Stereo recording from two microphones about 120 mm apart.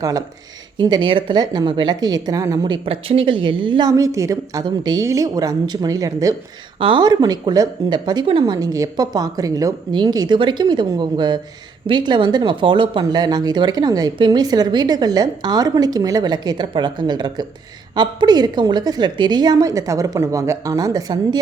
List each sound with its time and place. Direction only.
0.0 s speech: 30° right (ahead or behind)
2.6 s a woman's voice: 50° right (ahead or behind); by 4.6 s 25° right (ahead or behind)
4.6 s speech: 35° right (ahead or behind)
6.7 s speech: 45° right (ahead or behind)
8.5 s speech: 30° right (ahead or behind)